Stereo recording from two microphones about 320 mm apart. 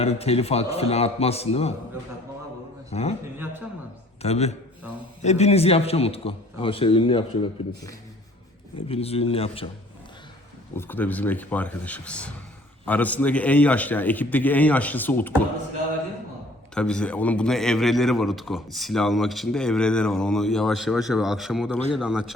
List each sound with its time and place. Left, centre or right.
0.0 s a man's voice: centre
2.9 s a man's voice: centre
3.3 s a man's voice: centre
4.2 s a man's voice: centre
8.9 s a man's voice: centre
10.8 s a man's voice: centre
16.7 s a man's voice: centre